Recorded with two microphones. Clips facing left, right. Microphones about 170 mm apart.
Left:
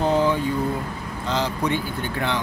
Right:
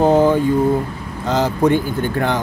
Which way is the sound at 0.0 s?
50° right (ahead or behind).